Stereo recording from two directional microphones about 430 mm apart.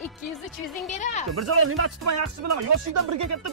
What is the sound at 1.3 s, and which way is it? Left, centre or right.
Speech, right.